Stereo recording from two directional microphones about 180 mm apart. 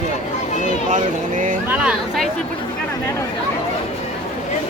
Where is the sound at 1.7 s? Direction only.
5° right (ahead or behind).